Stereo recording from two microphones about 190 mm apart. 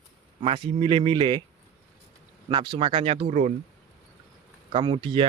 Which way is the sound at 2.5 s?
25° right (ahead or behind).